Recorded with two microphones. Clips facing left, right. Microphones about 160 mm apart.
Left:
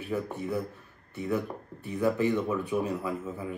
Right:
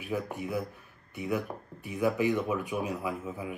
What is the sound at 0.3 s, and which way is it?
Speech, 15° right (ahead or behind).